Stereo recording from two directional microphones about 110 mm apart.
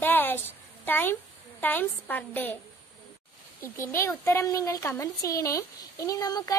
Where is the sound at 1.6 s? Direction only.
15° left (ahead or behind).